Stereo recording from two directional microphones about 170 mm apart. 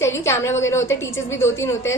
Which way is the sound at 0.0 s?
15° left (ahead or behind).